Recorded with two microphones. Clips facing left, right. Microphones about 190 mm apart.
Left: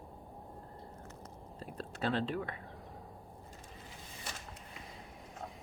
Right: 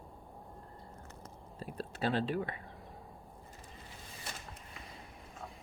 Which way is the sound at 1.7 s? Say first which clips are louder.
Right 1 dB; 35° right (ahead or behind).